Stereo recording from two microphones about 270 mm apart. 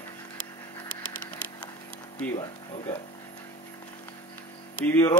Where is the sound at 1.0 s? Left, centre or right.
Left.